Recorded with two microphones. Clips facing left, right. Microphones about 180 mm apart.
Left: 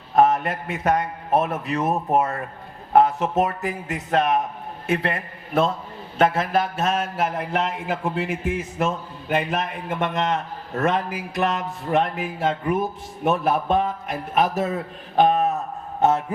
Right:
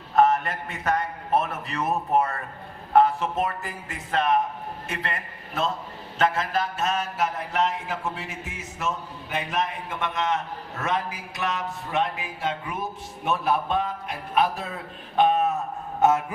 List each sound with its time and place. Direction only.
0.9 s a man's voice: 50° left (ahead or behind)
15.1 s a sound: 40° left (ahead or behind)
16.0 s a man's voice: 30° left (ahead or behind)